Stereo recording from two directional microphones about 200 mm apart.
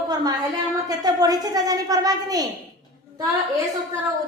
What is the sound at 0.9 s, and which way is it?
A woman's voice, 20° right (ahead or behind).